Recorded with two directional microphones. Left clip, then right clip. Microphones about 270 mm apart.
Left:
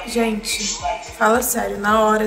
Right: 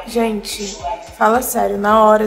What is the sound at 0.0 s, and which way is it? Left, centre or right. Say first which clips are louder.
A woman's voice: right 2 dB; right.